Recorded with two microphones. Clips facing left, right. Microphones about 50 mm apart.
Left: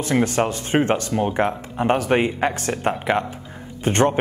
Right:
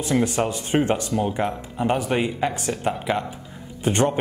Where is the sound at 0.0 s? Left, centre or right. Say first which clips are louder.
Left 2 dB; left.